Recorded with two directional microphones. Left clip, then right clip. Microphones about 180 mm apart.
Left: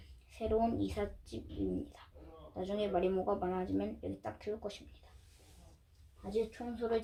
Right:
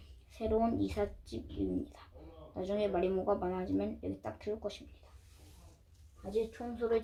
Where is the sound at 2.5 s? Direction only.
15° right (ahead or behind).